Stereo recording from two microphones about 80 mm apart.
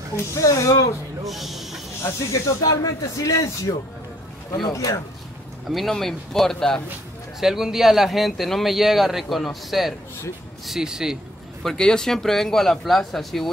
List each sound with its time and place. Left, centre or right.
0.1 s speech: left
1.2 s speech: centre
2.0 s speech: left
4.7 s speech: left
5.7 s speech: centre
11.6 s speech: centre